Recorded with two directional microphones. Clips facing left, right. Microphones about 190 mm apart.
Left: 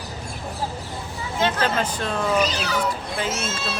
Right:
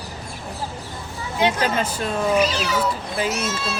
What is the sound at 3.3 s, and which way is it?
Speech, 25° left (ahead or behind).